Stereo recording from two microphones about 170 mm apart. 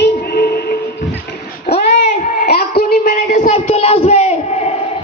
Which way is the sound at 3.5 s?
35° left (ahead or behind).